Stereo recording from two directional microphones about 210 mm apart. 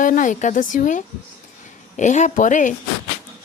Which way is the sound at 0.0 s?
40° left (ahead or behind).